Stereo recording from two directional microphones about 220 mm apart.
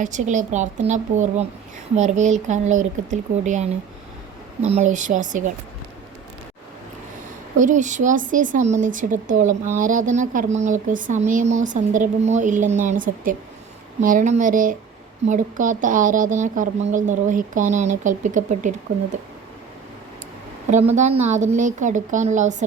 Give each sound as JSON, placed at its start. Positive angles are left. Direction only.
{"t": 0.0, "sound": "speech", "side_deg": -35}
{"t": 7.6, "sound": "speech", "side_deg": -35}
{"t": 20.9, "sound": "speech", "side_deg": -30}